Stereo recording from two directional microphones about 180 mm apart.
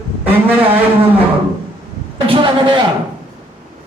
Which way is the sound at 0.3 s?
10° right (ahead or behind).